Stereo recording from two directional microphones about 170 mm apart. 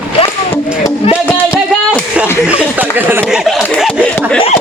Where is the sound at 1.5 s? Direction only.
5° right (ahead or behind).